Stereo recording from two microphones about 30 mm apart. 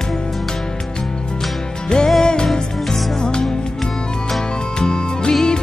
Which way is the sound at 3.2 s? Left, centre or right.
Left.